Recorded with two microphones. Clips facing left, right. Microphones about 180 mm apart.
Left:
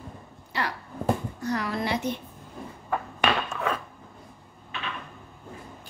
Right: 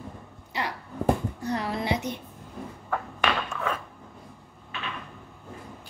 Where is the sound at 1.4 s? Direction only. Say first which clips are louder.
Left 1 dB; 30° right (ahead or behind).